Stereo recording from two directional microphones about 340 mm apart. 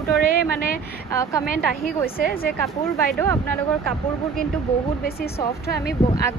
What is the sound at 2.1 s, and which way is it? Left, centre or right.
Speech, left.